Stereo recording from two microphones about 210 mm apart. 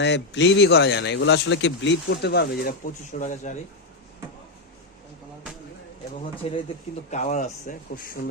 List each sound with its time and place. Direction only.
0.0 s speech: 60° left (ahead or behind); by 3.5 s 35° left (ahead or behind)
6.4 s speech: 30° left (ahead or behind)